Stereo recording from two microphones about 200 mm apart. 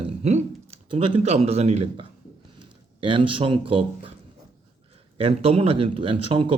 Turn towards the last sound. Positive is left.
turn(degrees=-25)  # may be behind; listen again after turning